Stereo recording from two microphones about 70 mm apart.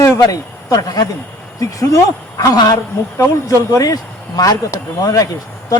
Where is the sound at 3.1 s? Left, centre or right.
Left.